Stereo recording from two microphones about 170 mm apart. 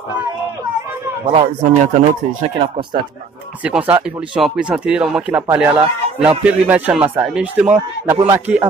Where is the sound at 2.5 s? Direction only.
30° right (ahead or behind).